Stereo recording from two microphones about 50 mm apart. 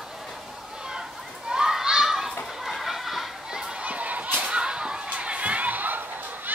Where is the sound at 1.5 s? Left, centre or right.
Centre.